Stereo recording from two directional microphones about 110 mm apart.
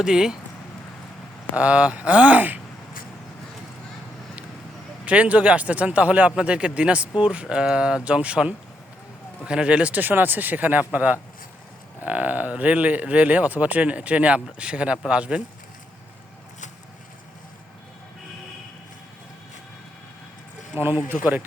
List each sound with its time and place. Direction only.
0.0 s speech: 5° right (ahead or behind)
1.5 s speech: 10° right (ahead or behind)
5.0 s speech: 10° right (ahead or behind)
20.7 s speech: 20° right (ahead or behind)